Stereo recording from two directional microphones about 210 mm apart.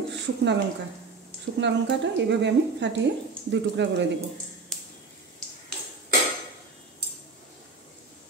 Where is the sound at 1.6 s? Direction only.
60° right (ahead or behind).